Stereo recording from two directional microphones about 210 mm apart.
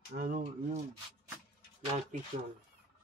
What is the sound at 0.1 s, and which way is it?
Speech, 40° right (ahead or behind).